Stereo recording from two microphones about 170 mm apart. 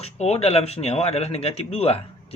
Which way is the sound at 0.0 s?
40° left (ahead or behind).